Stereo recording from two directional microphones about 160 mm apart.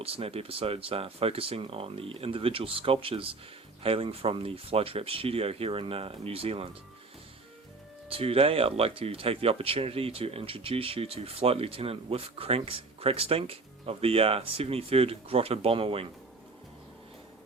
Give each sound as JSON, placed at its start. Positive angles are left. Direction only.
{"t": 0.0, "sound": "speech", "side_deg": -35}
{"t": 8.1, "sound": "speech", "side_deg": -35}